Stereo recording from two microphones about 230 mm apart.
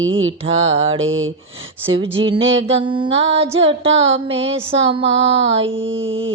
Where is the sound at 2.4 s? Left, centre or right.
Right.